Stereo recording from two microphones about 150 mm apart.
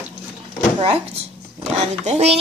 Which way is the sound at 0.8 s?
40° right (ahead or behind).